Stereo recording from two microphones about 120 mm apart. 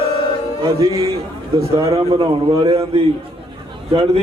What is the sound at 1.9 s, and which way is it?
A man's voice, 50° right (ahead or behind).